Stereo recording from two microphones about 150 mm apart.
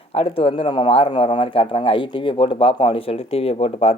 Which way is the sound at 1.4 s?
35° left (ahead or behind).